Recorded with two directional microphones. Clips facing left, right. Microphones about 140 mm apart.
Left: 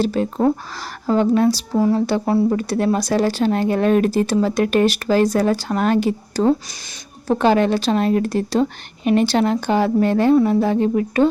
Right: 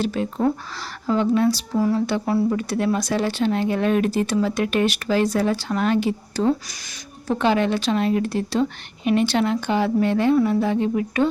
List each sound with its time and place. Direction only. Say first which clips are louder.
0.0 s speech: left 4 dB; 35° left (ahead or behind)